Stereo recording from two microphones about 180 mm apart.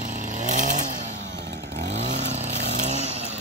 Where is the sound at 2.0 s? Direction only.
40° right (ahead or behind).